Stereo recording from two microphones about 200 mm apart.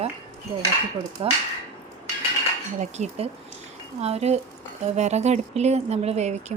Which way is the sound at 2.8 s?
35° right (ahead or behind).